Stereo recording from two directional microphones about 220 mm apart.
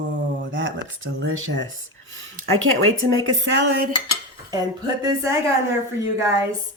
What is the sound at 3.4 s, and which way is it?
Speech, 55° right (ahead or behind).